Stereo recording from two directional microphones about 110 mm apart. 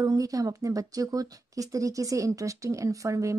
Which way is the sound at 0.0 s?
30° right (ahead or behind).